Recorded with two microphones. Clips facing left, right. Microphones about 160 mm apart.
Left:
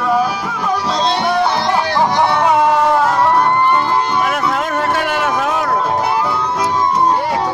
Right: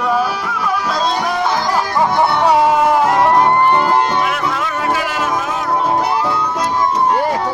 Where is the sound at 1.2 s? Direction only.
30° left (ahead or behind).